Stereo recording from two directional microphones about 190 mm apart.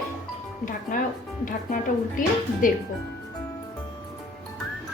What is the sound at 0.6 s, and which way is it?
A woman's voice, 45° left (ahead or behind).